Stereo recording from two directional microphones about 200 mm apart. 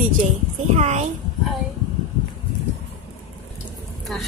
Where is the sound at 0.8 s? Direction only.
35° right (ahead or behind).